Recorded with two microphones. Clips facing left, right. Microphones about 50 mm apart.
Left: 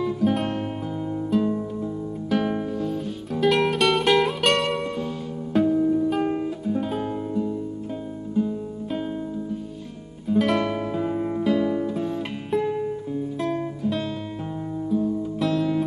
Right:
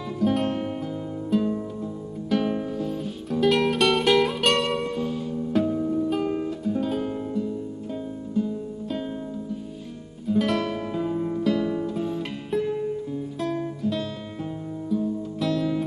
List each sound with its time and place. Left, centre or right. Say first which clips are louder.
0.0 s music: left 1 dB; centre
2.2 s music: even; centre
10.2 s music: left 2 dB; centre
10.7 s music: left 2 dB; centre
11.4 s music: left 3 dB; centre
11.9 s music: left 1 dB; centre